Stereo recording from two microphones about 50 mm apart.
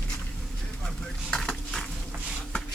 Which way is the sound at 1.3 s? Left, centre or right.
Centre.